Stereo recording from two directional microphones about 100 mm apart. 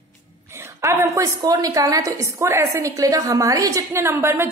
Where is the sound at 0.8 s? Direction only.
25° right (ahead or behind).